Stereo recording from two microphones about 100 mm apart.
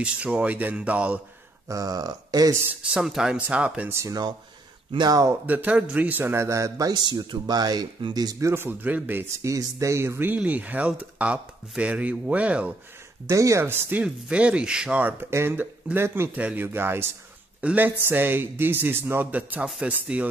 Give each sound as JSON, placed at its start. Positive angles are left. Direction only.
{"t": 0.0, "sound": "speech", "side_deg": -10}
{"t": 1.7, "sound": "speech", "side_deg": -35}
{"t": 2.6, "sound": "speech", "side_deg": -15}
{"t": 3.9, "sound": "speech", "side_deg": -30}
{"t": 4.9, "sound": "speech", "side_deg": -40}
{"t": 5.3, "sound": "speech", "side_deg": -15}
{"t": 6.9, "sound": "speech", "side_deg": -45}
{"t": 13.3, "sound": "speech", "side_deg": -30}